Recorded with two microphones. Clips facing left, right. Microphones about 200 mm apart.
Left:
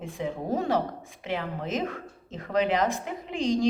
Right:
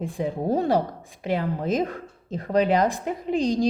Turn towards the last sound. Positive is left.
turn(degrees=-35)  # may be behind; listen again after turning